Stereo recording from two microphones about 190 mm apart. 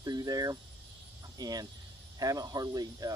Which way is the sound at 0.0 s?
20° right (ahead or behind).